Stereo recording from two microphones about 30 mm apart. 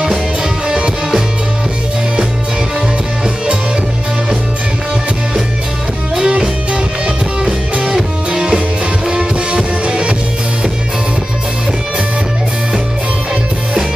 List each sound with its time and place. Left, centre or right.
0.7 s music: right
6.1 s music: centre
7.8 s music: centre; by 10.1 s right